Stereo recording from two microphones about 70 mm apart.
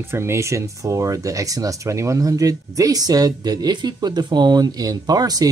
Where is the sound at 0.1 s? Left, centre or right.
Right.